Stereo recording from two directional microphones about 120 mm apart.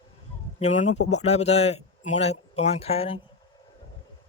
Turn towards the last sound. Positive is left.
turn(degrees=55)  # may be behind; listen again after turning